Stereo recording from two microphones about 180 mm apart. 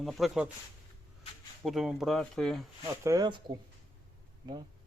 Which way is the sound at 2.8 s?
15° right (ahead or behind).